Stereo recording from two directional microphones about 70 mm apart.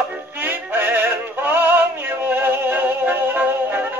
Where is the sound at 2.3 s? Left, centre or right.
Right.